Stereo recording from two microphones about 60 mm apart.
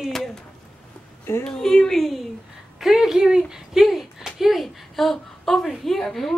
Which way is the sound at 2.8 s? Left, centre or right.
Centre.